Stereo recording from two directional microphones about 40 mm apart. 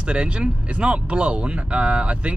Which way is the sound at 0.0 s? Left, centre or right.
Right.